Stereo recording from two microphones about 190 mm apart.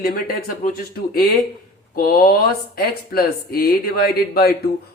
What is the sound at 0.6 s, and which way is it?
Speech, 50° left (ahead or behind).